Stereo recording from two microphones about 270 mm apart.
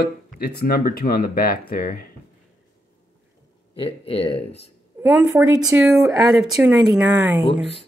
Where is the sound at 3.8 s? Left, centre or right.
Left.